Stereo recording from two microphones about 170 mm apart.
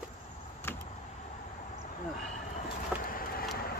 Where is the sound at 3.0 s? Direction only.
55° left (ahead or behind).